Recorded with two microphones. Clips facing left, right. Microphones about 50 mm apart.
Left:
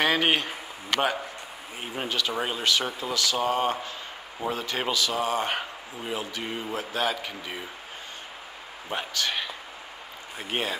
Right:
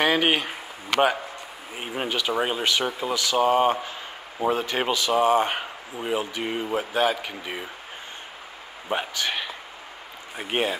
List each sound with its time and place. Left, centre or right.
0.0 s speech: centre
1.8 s speech: centre
8.8 s speech: centre